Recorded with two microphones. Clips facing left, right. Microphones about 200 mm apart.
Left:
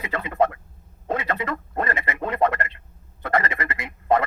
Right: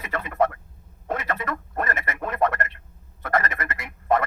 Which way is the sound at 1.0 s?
15° left (ahead or behind).